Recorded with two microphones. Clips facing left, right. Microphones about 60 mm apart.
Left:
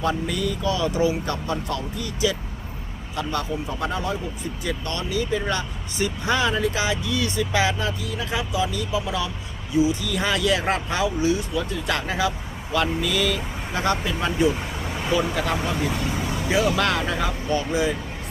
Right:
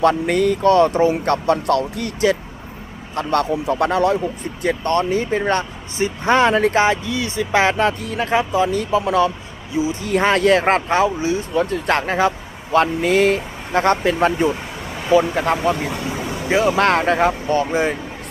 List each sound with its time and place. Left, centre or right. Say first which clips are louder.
0.0 s speech: right 9 dB; right
1.1 s speech: right 9 dB; right
7.6 s speech: right 7 dB; right
9.7 s speech: left 1 dB; right
10.0 s speech: right 7 dB; right
15.1 s speech: right 9 dB; right
15.9 s vehicle: right 2 dB; centre
16.5 s speech: right 6 dB; right